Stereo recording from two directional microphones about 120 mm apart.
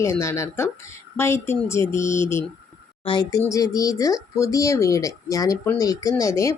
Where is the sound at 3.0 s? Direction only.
45° left (ahead or behind).